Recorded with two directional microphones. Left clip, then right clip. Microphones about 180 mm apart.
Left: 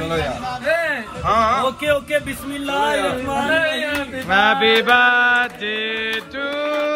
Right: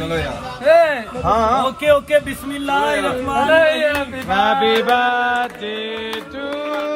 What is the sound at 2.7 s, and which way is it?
Speech, centre (ahead or behind).